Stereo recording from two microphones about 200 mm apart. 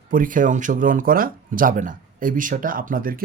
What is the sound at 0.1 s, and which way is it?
Speech, 40° right (ahead or behind).